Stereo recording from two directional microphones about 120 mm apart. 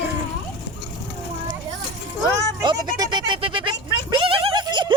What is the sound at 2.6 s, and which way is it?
Speech, 35° right (ahead or behind).